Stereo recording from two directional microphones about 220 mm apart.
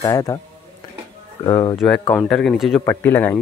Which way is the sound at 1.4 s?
20° left (ahead or behind).